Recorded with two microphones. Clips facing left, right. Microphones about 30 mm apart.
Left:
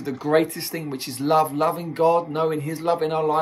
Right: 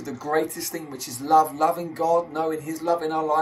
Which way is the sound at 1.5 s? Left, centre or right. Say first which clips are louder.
Even; left.